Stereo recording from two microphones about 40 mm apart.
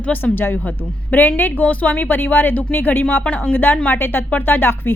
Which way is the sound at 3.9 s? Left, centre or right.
Left.